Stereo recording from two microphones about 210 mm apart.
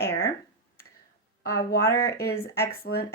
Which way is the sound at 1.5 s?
45° left (ahead or behind).